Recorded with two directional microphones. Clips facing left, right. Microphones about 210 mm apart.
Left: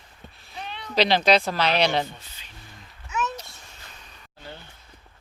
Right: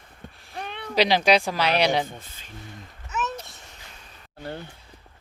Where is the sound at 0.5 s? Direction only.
55° right (ahead or behind).